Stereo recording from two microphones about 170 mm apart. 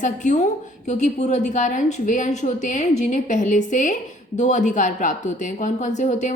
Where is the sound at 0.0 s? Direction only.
45° left (ahead or behind).